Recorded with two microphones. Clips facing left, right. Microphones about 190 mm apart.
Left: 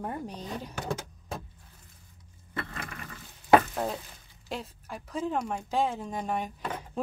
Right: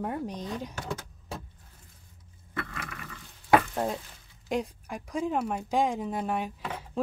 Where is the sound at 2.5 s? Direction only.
30° left (ahead or behind).